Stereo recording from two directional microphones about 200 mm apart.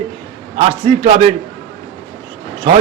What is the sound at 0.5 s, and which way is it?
Speech, 30° right (ahead or behind).